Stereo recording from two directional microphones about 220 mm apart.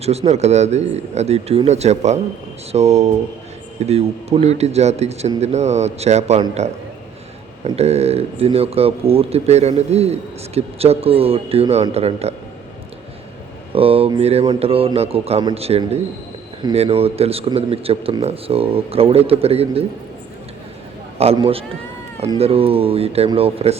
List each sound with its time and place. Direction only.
0.0 s a man's voice: 30° right (ahead or behind)
13.7 s a man's voice: 25° right (ahead or behind)
21.2 s a man's voice: 25° right (ahead or behind)